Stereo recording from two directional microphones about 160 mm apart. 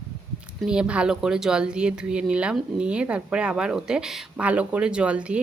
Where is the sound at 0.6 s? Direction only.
5° right (ahead or behind).